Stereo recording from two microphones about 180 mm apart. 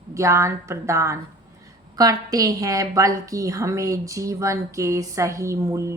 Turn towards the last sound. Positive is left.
turn(degrees=-15)  # may be behind; listen again after turning